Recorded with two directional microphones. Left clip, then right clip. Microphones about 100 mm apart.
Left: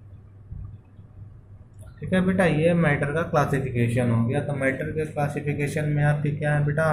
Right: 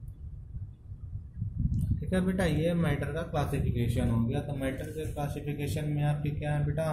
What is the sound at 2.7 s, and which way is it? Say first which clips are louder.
Speech: left 9 dB; 85° right.